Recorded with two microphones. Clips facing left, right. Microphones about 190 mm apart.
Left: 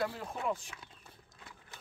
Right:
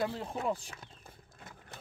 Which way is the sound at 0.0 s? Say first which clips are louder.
Right 2 dB; 25° right (ahead or behind).